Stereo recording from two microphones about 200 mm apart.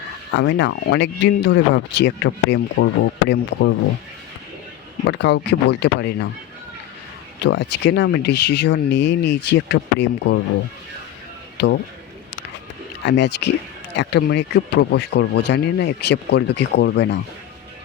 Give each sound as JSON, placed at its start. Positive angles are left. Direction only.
{"t": 0.3, "sound": "speech", "side_deg": 65}
{"t": 5.0, "sound": "speech", "side_deg": 60}
{"t": 7.4, "sound": "speech", "side_deg": 60}
{"t": 11.5, "sound": "speech", "side_deg": 55}
{"t": 13.0, "sound": "speech", "side_deg": 60}